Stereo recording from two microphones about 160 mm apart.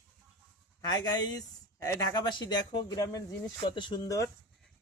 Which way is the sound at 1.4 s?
20° left (ahead or behind).